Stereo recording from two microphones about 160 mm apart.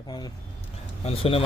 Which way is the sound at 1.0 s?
35° left (ahead or behind).